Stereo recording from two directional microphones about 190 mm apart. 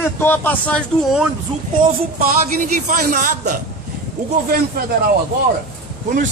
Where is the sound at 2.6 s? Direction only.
45° right (ahead or behind).